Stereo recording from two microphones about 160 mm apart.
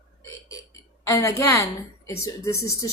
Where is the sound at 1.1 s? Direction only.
20° left (ahead or behind).